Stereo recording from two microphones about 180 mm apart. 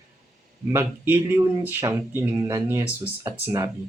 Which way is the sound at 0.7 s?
10° right (ahead or behind).